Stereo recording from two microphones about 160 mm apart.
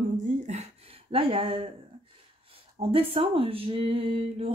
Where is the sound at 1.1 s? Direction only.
35° right (ahead or behind).